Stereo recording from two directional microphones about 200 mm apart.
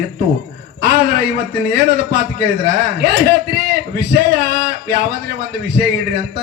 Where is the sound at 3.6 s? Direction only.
50° right (ahead or behind).